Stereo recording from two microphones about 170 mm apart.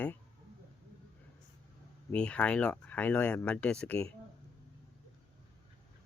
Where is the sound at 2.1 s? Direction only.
5° left (ahead or behind).